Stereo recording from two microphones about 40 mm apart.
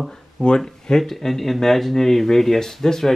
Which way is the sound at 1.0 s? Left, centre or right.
Centre.